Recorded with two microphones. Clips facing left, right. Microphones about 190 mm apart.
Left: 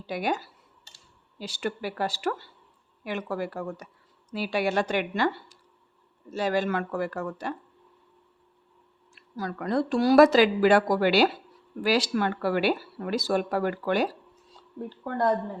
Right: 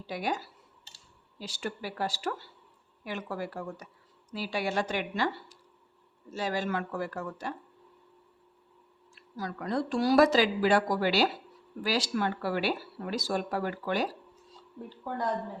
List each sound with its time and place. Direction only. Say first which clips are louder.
0.1 s speech: left 4 dB; 60° left (ahead or behind)
1.4 s speech: left 5 dB; 65° left (ahead or behind)
6.3 s speech: left 5 dB; 60° left (ahead or behind)
9.1 s a woman's voice: left 4 dB; 60° left (ahead or behind)